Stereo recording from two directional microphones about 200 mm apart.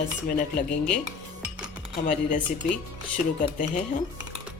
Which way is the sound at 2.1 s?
40° left (ahead or behind).